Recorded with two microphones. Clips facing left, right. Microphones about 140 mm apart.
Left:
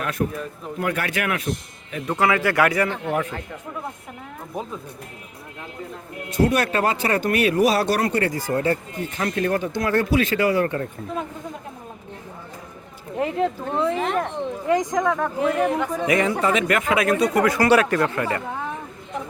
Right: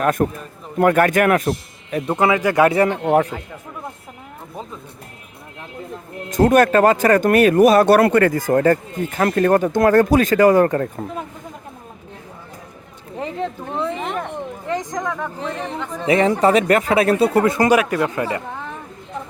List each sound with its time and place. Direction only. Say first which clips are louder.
0.0 s speech: right 6 dB; 50° right (ahead or behind)
2.0 s speech: right 3 dB; 20° right (ahead or behind)
2.9 s speech: right 8 dB; 55° right (ahead or behind)
6.3 s speech: right 7 dB; 45° right (ahead or behind)
13.1 s speech: left 3 dB; 5° left (ahead or behind)
14.7 s speech: left 4 dB; 10° left (ahead or behind)
16.0 s speech: right 7 dB; 30° right (ahead or behind)
17.7 s speech: right 1 dB; 10° right (ahead or behind)